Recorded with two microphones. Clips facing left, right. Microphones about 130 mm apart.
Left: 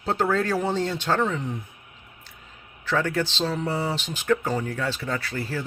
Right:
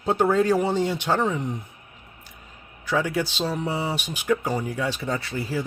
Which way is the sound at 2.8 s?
15° right (ahead or behind).